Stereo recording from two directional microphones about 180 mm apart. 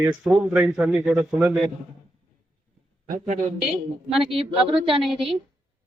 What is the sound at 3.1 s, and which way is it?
Speech, 45° right (ahead or behind).